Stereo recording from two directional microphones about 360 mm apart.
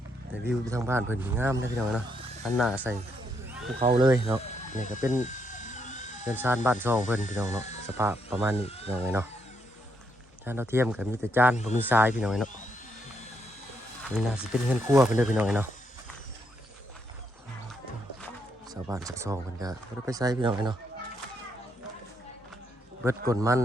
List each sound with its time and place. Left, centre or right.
0.6 s speech: centre
4.7 s speech: left
5.2 s helicopter: left
6.2 s speech: centre
7.6 s a sound: centre
7.9 s speech: centre
8.6 s speech: centre
8.9 s speech: centre
10.4 s speech: centre
14.1 s speech: centre
18.7 s speech: centre
23.0 s speech: centre